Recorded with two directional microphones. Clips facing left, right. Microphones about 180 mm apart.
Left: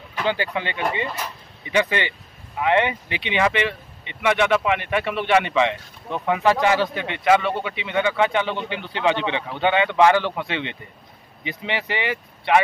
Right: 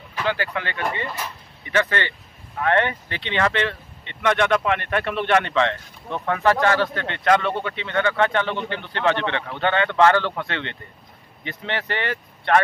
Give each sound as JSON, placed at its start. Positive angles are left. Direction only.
{"t": 0.2, "sound": "speech", "side_deg": 20}